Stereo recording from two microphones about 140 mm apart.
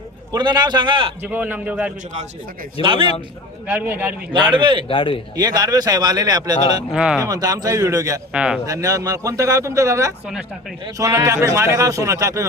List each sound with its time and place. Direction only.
0.3 s a man's voice: 30° right (ahead or behind)
1.2 s a man's voice: 10° right (ahead or behind)
2.8 s a man's voice: 40° right (ahead or behind)
3.7 s a man's voice: 15° right (ahead or behind)
4.3 s a man's voice: 35° right (ahead or behind)
4.9 s speech: 40° left (ahead or behind)
5.4 s a man's voice: 30° right (ahead or behind)
6.9 s speech: 5° right (ahead or behind)
7.3 s a man's voice: 25° right (ahead or behind)
8.3 s a man's voice: 5° right (ahead or behind)
8.6 s a man's voice: 25° right (ahead or behind)